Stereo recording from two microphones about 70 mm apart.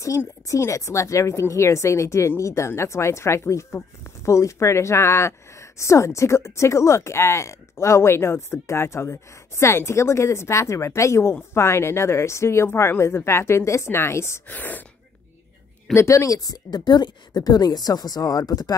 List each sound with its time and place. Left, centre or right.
0.5 s a woman's voice: left
14.5 s speech: left
15.9 s a woman's voice: left